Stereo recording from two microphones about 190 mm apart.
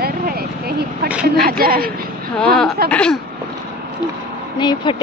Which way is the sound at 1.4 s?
50° right (ahead or behind).